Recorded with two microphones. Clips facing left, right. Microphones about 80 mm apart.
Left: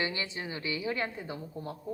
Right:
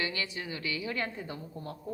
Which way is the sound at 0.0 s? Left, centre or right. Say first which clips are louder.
Left 1 dB; left.